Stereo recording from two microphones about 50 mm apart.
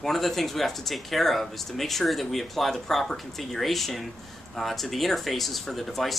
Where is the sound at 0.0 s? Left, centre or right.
Centre.